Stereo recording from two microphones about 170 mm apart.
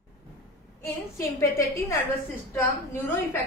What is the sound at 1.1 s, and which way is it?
A woman's voice, 15° left (ahead or behind).